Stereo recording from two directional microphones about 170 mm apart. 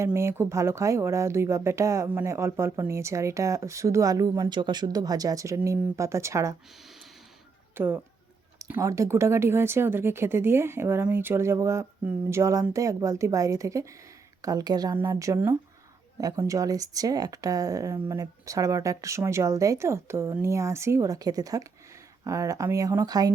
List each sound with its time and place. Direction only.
0.0 s speech: 15° right (ahead or behind)
7.8 s speech: 15° right (ahead or behind)